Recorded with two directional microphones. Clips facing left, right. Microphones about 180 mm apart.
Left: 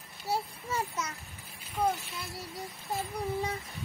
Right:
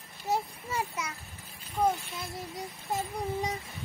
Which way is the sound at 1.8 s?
20° right (ahead or behind).